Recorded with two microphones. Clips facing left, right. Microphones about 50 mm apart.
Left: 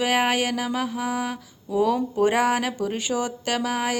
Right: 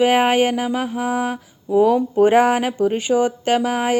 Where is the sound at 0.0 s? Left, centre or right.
Right.